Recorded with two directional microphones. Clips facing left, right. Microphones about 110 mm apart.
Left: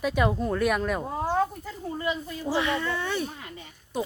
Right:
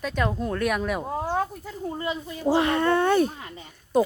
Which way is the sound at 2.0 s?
20° right (ahead or behind).